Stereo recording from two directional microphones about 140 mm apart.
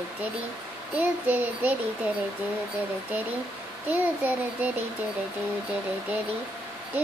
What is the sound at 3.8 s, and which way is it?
Speech, 10° right (ahead or behind).